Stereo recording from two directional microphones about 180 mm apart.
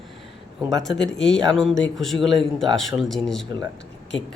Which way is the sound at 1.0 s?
5° left (ahead or behind).